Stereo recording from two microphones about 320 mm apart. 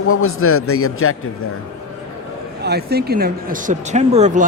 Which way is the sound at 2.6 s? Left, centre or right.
Right.